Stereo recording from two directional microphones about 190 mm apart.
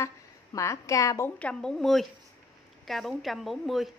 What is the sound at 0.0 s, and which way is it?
A woman's voice, 15° left (ahead or behind).